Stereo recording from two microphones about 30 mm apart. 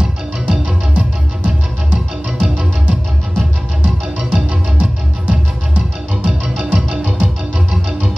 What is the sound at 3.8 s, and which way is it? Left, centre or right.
Music, right.